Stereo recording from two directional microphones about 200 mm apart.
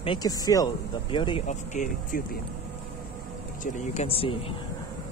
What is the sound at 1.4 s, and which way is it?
Speech, 40° left (ahead or behind).